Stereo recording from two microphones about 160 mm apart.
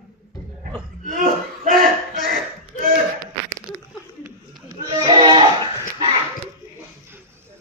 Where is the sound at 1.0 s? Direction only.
55° right (ahead or behind).